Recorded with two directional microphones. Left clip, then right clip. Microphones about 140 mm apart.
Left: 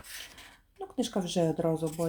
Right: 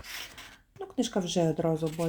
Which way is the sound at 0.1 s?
5° right (ahead or behind).